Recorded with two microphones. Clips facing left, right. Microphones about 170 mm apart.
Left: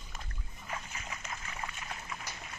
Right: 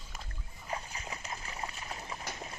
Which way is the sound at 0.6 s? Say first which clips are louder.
Right 3 dB; 35° right (ahead or behind).